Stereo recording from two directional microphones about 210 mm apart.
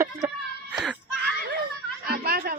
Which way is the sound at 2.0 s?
45° right (ahead or behind).